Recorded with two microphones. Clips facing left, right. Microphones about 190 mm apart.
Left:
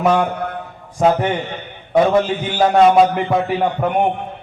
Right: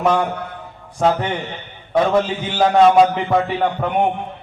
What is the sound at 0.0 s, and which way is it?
A man's voice, 10° left (ahead or behind).